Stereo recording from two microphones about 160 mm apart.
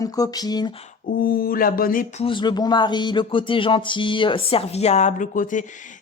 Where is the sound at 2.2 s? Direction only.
30° left (ahead or behind).